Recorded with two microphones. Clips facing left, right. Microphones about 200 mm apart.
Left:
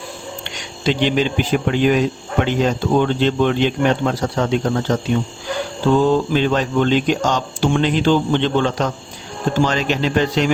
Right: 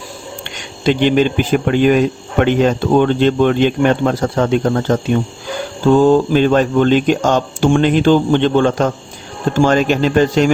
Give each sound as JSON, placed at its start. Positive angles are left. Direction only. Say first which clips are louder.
{"t": 0.9, "sound": "speech", "louder": "right 5 dB", "side_deg": -50}
{"t": 6.0, "sound": "speech", "louder": "right 7 dB", "side_deg": -45}